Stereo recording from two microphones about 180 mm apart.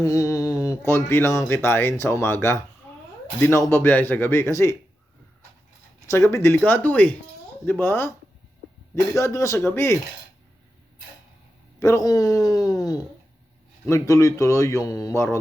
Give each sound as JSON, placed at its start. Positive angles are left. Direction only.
{"t": 0.0, "sound": "speech", "side_deg": 15}
{"t": 6.1, "sound": "speech", "side_deg": 15}
{"t": 9.1, "sound": "speech", "side_deg": 15}
{"t": 11.8, "sound": "speech", "side_deg": 15}